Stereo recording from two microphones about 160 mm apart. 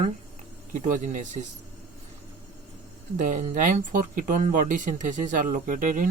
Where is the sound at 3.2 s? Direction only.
55° right (ahead or behind).